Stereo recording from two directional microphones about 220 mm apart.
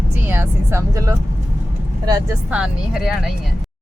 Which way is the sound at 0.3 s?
10° right (ahead or behind).